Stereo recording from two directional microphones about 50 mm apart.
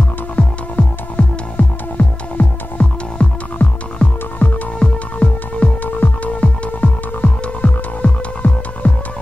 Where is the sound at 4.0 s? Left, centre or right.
Left.